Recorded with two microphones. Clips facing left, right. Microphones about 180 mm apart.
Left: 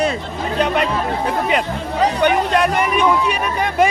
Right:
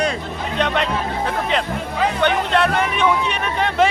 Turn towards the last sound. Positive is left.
turn(degrees=10)  # may be behind; listen again after turning